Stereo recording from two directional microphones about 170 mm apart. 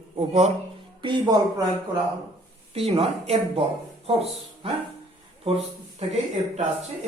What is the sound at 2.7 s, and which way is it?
Speech, 35° right (ahead or behind).